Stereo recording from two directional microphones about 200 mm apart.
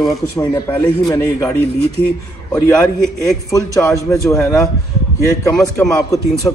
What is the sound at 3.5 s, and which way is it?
A man's voice, 15° left (ahead or behind).